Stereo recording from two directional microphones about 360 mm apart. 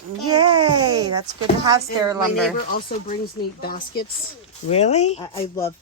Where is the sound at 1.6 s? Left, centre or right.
Centre.